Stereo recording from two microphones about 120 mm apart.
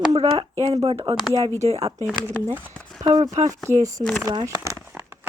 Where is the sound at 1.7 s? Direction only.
55° right (ahead or behind).